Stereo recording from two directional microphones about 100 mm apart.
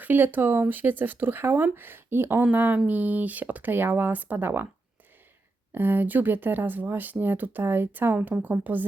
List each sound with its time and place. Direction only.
0.0 s speech: 20° right (ahead or behind)
5.7 s speech: 20° right (ahead or behind)